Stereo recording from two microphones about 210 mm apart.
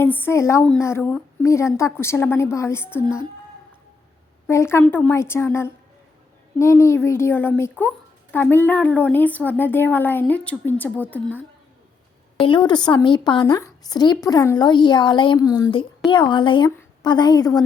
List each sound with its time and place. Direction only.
0.0 s speech: 10° left (ahead or behind)
4.4 s speech: 10° left (ahead or behind)
12.4 s a woman's voice: 20° left (ahead or behind)